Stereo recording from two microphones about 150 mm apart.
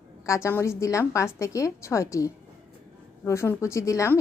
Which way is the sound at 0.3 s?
20° left (ahead or behind).